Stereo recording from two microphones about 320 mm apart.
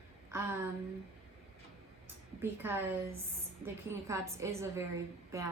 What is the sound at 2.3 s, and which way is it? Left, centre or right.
A woman's voice, centre.